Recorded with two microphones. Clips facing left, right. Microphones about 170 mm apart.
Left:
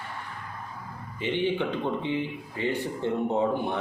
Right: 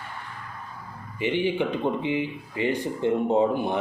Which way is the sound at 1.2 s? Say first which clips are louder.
Right 2 dB; 10° right (ahead or behind).